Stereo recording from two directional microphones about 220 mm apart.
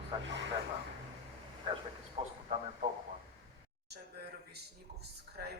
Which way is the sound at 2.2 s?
25° right (ahead or behind).